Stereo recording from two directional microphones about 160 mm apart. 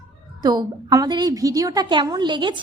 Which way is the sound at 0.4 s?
25° right (ahead or behind).